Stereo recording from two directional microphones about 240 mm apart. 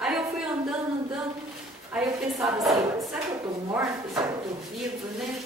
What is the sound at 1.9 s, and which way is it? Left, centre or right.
Speech, centre.